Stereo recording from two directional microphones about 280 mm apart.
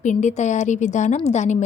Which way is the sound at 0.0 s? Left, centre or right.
Left.